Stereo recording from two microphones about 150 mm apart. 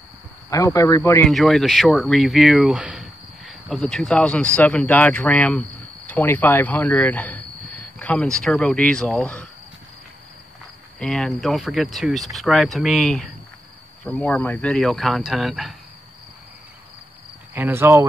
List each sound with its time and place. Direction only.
0.5 s speech: 20° left (ahead or behind)
1.2 s speech: centre (ahead or behind)
11.0 s speech: 5° left (ahead or behind)
17.6 s speech: 15° right (ahead or behind)